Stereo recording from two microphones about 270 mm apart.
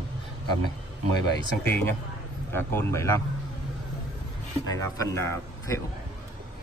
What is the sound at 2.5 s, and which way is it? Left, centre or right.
Speech, centre.